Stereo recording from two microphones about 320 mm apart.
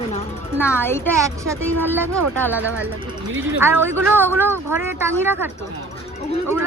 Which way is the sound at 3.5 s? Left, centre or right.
Centre.